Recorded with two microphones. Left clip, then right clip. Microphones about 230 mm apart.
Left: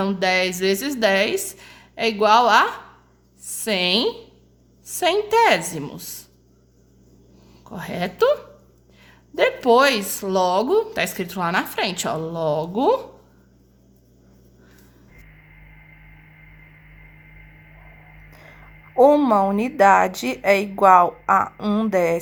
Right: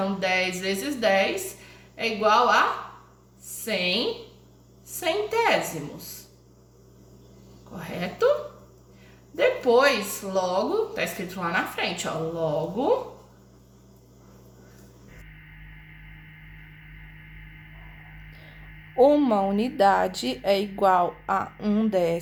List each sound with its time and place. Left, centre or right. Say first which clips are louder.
0.0 s a woman's voice: left 5 dB; left
7.8 s speech: left 5 dB; left
9.6 s speech: left 5 dB; left
18.9 s a woman's voice: left 5 dB; centre